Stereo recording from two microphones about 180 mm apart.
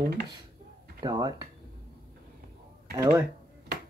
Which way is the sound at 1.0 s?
20° right (ahead or behind).